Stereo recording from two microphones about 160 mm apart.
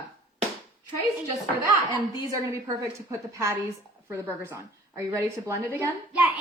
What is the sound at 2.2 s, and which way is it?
A woman's voice, 20° right (ahead or behind).